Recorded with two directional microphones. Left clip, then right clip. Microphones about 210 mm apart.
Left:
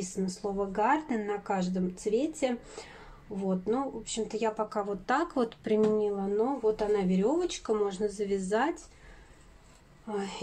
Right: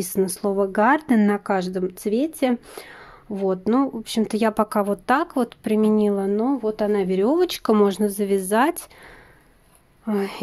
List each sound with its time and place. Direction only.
0.0 s speech: 50° right (ahead or behind); by 5.9 s 35° right (ahead or behind)
5.9 s speech: 50° right (ahead or behind)
10.0 s speech: 50° right (ahead or behind)